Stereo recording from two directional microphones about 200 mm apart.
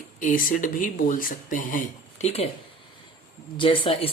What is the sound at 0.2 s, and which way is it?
Speech, 40° left (ahead or behind).